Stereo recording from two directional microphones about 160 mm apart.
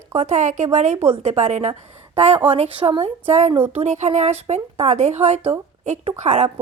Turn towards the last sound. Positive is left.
turn(degrees=-45)  # may be behind; listen again after turning